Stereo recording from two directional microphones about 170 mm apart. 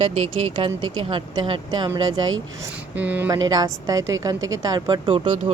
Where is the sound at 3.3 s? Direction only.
20° right (ahead or behind).